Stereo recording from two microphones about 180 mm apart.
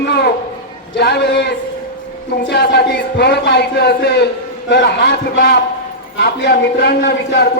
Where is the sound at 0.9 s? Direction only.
65° left (ahead or behind).